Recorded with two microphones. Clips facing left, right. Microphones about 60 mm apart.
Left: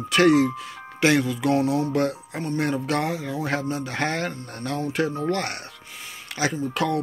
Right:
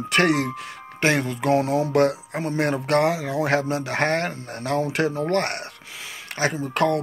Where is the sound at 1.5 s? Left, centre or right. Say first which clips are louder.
Right 4 dB; right.